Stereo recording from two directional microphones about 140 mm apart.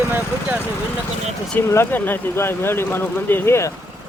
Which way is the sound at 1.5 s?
20° left (ahead or behind).